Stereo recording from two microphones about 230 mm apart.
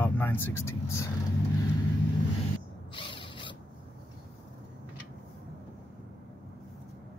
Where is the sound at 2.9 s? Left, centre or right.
Left.